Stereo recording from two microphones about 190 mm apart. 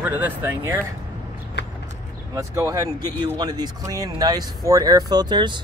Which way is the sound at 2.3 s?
15° right (ahead or behind).